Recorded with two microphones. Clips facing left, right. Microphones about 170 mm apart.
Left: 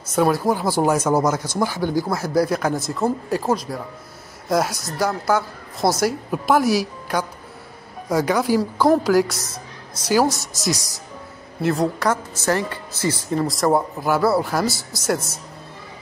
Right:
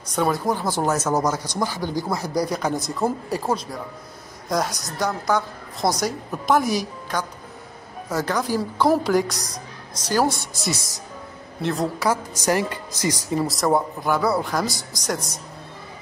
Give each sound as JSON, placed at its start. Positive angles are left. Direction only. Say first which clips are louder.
{"t": 0.1, "sound": "speech", "louder": "left 4 dB", "side_deg": 5}
{"t": 1.8, "sound": "speech", "louder": "left 4 dB", "side_deg": -15}
{"t": 2.4, "sound": "speech", "louder": "left 3 dB", "side_deg": 5}
{"t": 10.6, "sound": "speech", "louder": "left 4 dB", "side_deg": 0}
{"t": 12.4, "sound": "speech", "louder": "even", "side_deg": -15}